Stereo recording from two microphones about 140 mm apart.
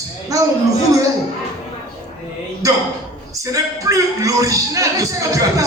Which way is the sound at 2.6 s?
25° right (ahead or behind).